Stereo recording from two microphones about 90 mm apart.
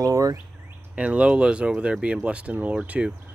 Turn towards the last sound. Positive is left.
turn(degrees=-15)  # may be behind; listen again after turning